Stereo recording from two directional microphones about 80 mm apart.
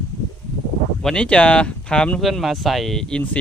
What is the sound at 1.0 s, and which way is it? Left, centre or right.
Speech, centre.